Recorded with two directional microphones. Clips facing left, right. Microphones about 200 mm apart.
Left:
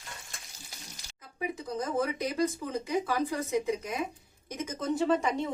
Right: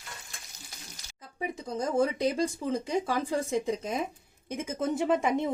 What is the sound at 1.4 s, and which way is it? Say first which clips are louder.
Speech: right 1 dB; 30° right (ahead or behind).